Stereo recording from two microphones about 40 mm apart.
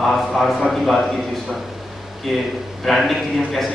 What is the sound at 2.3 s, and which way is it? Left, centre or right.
A man's voice, centre.